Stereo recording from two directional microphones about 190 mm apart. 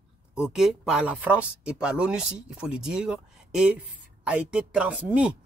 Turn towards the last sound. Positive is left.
turn(degrees=-5)  # may be behind; listen again after turning